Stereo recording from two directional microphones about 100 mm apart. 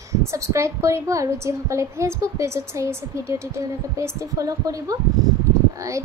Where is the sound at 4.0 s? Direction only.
35° right (ahead or behind).